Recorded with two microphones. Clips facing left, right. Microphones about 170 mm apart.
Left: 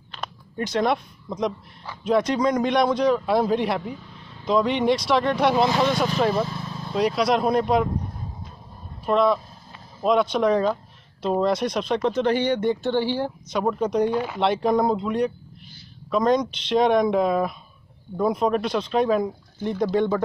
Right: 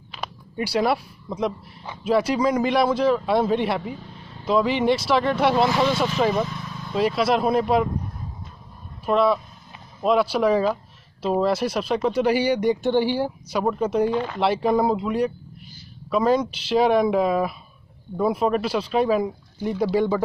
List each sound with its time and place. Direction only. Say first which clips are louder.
0.1 s a sound: right 1 dB; 10° right (ahead or behind)
2.0 s speech: even; 5° right (ahead or behind)
6.3 s vehicle: even; 30° left (ahead or behind)
6.9 s speech: even; centre (ahead or behind)
9.0 s speech: even; 5° right (ahead or behind)
14.1 s speech: even; 5° left (ahead or behind)
14.4 s speech: even; 5° right (ahead or behind)